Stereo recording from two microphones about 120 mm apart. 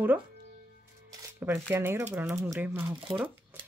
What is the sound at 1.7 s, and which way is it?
Speech, 20° right (ahead or behind).